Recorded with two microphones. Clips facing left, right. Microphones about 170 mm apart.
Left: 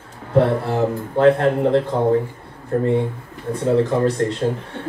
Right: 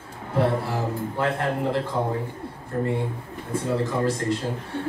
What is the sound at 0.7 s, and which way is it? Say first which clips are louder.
Speech: left 7 dB; 60° left (ahead or behind).